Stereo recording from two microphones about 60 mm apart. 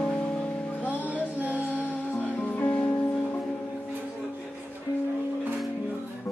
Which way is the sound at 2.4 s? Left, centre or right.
Left.